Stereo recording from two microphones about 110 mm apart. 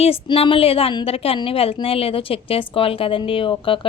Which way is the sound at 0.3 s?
50° left (ahead or behind).